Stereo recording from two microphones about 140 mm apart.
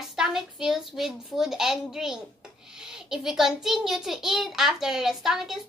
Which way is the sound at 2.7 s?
5° right (ahead or behind).